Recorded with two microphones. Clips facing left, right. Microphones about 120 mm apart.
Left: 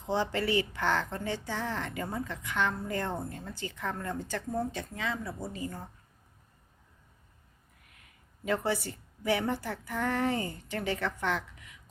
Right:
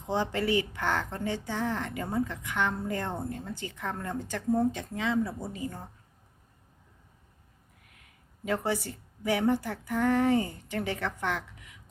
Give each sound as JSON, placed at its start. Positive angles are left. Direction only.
{"t": 0.1, "sound": "a woman's voice", "side_deg": -15}
{"t": 8.4, "sound": "a woman's voice", "side_deg": -15}